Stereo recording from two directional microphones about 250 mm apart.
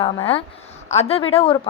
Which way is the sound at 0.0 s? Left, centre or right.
Left.